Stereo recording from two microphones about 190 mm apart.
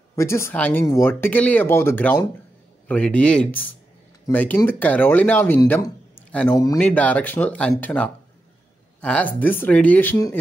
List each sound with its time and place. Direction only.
0.1 s speech: 15° left (ahead or behind)
5.6 s speech: 20° left (ahead or behind)